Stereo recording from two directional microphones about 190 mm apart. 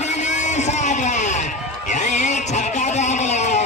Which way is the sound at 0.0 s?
35° left (ahead or behind).